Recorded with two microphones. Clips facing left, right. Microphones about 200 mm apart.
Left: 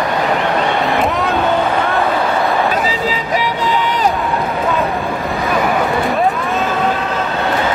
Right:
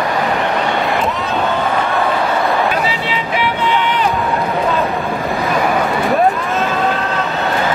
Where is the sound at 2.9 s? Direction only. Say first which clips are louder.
Left 2 dB; 40° left (ahead or behind).